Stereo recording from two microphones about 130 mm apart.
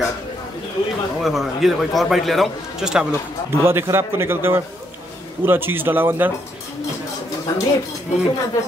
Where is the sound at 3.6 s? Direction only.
20° right (ahead or behind).